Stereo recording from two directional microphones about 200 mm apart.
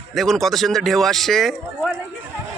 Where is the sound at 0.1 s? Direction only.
Centre (ahead or behind).